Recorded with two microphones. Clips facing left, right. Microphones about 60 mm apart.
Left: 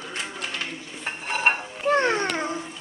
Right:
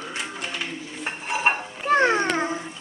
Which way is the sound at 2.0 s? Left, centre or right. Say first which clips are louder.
Right 3 dB; right.